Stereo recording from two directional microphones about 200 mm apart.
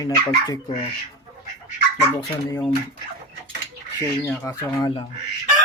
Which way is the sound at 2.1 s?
25° left (ahead or behind).